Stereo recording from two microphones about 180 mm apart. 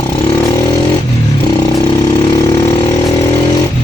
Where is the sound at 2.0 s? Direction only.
20° left (ahead or behind).